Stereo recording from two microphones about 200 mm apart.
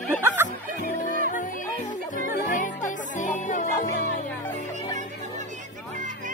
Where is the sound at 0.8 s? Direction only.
40° left (ahead or behind).